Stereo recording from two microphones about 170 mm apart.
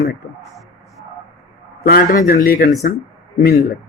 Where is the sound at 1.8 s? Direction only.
60° left (ahead or behind).